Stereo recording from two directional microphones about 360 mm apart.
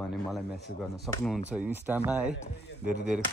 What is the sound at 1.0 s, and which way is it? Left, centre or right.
Speech, centre.